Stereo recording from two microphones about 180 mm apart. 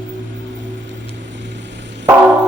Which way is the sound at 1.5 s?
75° right (ahead or behind).